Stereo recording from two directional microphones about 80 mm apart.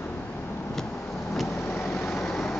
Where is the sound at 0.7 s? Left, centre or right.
Centre.